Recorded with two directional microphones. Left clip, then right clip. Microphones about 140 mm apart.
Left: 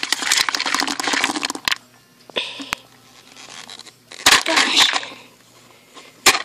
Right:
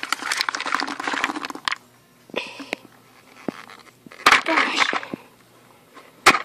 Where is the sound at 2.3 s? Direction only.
5° right (ahead or behind).